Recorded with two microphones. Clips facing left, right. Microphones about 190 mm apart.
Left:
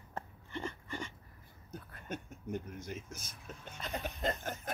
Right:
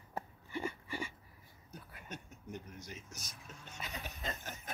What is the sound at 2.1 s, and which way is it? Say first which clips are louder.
Speech: left 7 dB; 50° left (ahead or behind).